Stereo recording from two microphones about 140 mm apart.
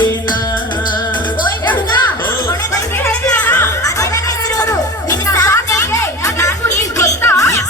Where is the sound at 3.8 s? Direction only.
25° left (ahead or behind).